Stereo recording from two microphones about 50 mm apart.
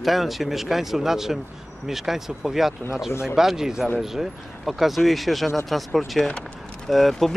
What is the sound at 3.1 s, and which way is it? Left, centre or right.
Speech, left.